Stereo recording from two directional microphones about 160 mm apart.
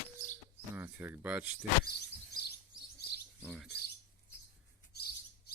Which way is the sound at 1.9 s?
80° left.